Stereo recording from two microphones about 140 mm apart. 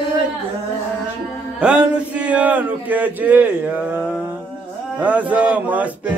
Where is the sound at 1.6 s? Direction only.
10° right (ahead or behind).